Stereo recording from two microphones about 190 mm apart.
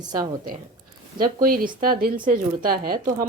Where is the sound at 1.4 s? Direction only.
50° right (ahead or behind).